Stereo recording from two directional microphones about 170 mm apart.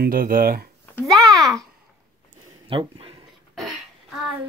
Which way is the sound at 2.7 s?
30° right (ahead or behind).